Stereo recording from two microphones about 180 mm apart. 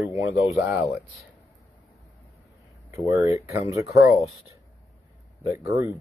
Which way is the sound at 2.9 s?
15° right (ahead or behind).